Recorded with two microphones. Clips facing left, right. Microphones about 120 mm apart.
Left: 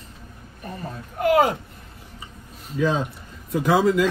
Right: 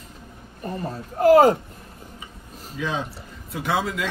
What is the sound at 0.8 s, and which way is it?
Speech, 35° right (ahead or behind).